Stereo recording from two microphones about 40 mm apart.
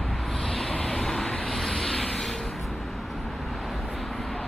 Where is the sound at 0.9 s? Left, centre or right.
Centre.